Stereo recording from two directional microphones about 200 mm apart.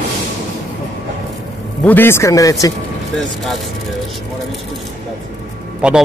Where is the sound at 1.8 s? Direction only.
10° left (ahead or behind).